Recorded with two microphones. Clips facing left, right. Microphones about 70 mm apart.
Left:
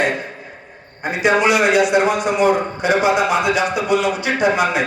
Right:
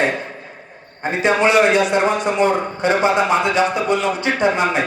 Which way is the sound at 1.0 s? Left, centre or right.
Right.